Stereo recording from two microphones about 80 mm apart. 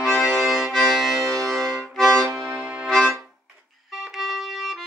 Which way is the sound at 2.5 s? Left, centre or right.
Centre.